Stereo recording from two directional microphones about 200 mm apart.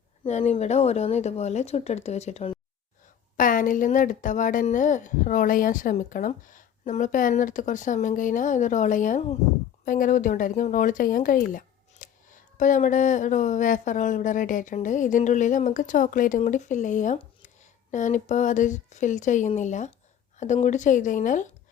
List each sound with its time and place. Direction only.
0.3 s speech: 35° left (ahead or behind)
3.3 s speech: 40° left (ahead or behind)